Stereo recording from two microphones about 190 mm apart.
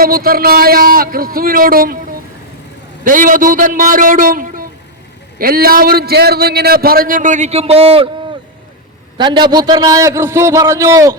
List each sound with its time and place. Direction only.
0.0 s a man's voice: 50° right (ahead or behind)
3.0 s a man's voice: 45° right (ahead or behind)
9.1 s a man's voice: 25° right (ahead or behind)